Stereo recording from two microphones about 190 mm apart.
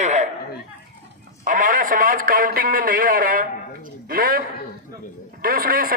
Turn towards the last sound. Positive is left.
turn(degrees=-50)  # may be behind; listen again after turning